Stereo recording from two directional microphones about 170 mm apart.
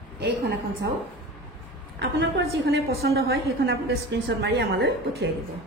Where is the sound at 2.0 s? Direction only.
90° right.